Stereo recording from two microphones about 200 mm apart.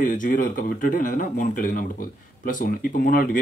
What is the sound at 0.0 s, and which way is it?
Speech, 40° left (ahead or behind).